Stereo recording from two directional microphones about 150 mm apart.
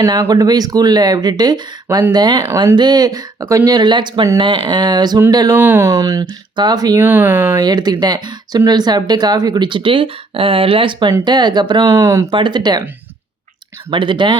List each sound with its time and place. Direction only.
0.0 s speech: 25° right (ahead or behind)
5.5 s speech: 10° right (ahead or behind)
7.0 s speech: 15° right (ahead or behind)
7.6 s speech: 25° right (ahead or behind)
12.3 s speech: 30° right (ahead or behind)
13.9 s speech: 35° right (ahead or behind)